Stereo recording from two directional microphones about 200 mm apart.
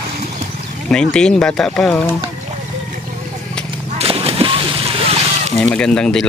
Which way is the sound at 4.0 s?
30° right (ahead or behind).